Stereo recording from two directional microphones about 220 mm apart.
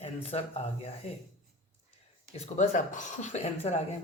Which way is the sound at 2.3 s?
30° left (ahead or behind).